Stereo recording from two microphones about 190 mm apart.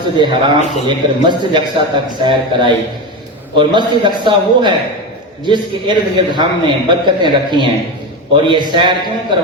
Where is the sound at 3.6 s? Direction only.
25° right (ahead or behind).